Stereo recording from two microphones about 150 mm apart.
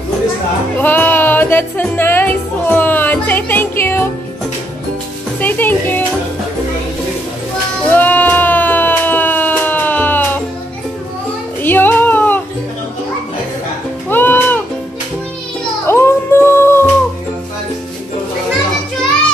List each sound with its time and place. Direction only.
0.7 s music: 10° left (ahead or behind)
5.4 s music: 10° left (ahead or behind)
7.9 s a sound: 10° left (ahead or behind)
11.6 s music: 10° left (ahead or behind)
14.0 s music: 15° left (ahead or behind)
15.9 s music: 15° left (ahead or behind)